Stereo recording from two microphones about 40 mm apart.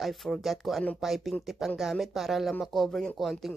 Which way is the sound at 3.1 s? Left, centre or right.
Centre.